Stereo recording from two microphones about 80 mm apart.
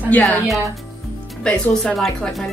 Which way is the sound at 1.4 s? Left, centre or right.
Centre.